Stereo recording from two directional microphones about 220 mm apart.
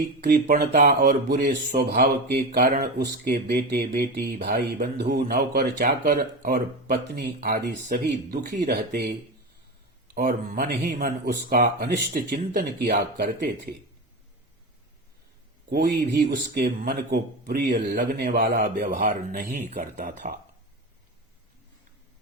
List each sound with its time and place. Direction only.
0.2 s speech: 45° right (ahead or behind)
5.2 s speech: 35° right (ahead or behind)
10.2 s speech: 40° right (ahead or behind)
15.7 s a man's voice: 45° right (ahead or behind)